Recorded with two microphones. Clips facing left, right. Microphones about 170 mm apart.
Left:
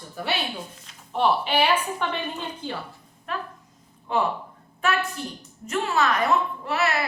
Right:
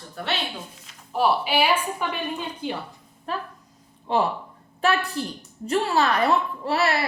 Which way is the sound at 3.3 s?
35° right (ahead or behind).